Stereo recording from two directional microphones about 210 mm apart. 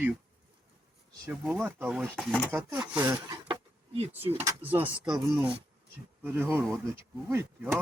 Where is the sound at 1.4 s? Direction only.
5° right (ahead or behind); by 4.0 s 25° right (ahead or behind).